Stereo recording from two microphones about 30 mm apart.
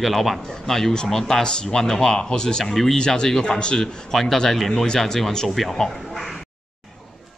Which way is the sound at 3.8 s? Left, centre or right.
Centre.